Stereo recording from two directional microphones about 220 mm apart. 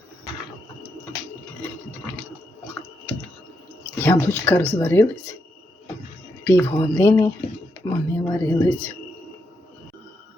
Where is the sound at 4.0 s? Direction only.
10° left (ahead or behind).